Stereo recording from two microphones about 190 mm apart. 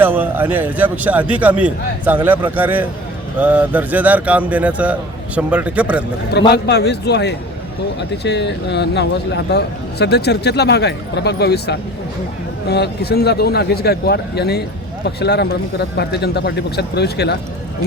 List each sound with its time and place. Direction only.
0.0 s a man's voice: 10° right (ahead or behind)
6.5 s speech: 60° left (ahead or behind)